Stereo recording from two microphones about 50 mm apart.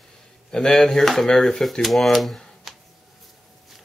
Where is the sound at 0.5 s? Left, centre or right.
Centre.